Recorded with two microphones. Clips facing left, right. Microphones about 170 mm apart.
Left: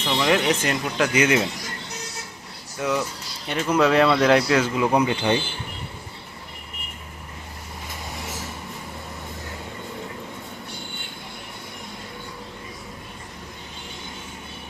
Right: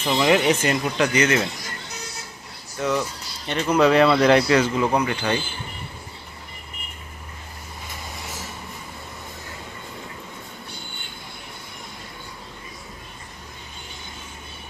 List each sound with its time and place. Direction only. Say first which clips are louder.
0.0 s speech: right 2 dB; 5° right (ahead or behind)
2.7 s speech: right 1 dB; 5° left (ahead or behind)
4.9 s speech: left 2 dB; 20° left (ahead or behind)